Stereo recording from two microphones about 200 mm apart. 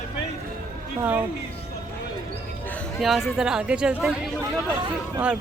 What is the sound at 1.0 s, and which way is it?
Speech, 10° right (ahead or behind).